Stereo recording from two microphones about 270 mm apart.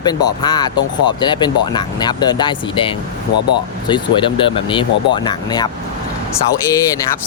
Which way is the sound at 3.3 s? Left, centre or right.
Left.